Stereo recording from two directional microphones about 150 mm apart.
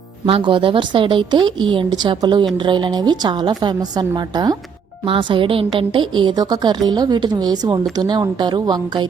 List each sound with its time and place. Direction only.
0.3 s a woman's voice: 35° right (ahead or behind)